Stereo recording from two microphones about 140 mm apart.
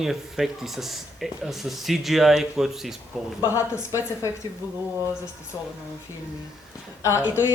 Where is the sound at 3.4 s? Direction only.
20° left (ahead or behind).